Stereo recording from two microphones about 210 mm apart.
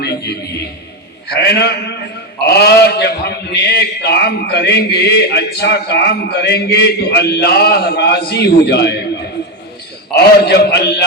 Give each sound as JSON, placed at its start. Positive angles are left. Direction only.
{"t": 0.0, "sound": "a man's voice", "side_deg": 50}